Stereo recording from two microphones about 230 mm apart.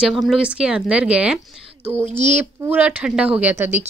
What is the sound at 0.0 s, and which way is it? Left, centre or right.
Speech, centre.